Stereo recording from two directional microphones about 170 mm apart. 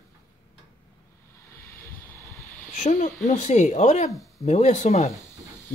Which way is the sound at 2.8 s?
45° left (ahead or behind).